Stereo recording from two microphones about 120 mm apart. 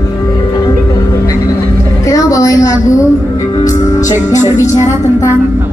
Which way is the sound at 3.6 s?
90° left.